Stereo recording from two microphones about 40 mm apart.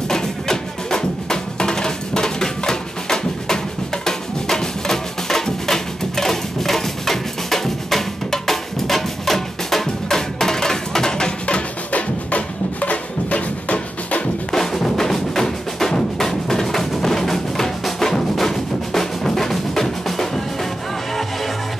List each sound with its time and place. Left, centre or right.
0.1 s music: centre; by 14.2 s left
14.5 s music: centre